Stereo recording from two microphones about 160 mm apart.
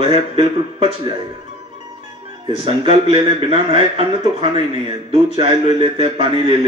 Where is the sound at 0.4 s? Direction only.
35° right (ahead or behind).